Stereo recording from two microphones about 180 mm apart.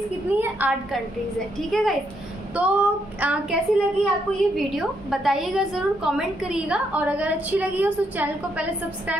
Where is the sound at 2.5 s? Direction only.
5° right (ahead or behind).